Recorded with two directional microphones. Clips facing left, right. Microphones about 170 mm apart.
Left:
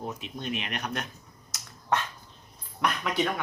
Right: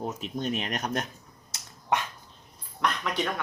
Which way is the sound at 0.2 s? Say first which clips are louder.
Right 4 dB; 40° right (ahead or behind).